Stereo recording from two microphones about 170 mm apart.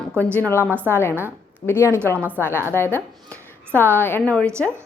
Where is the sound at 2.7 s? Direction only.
15° left (ahead or behind).